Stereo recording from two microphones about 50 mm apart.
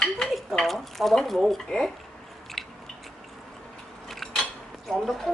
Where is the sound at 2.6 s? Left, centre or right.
Centre.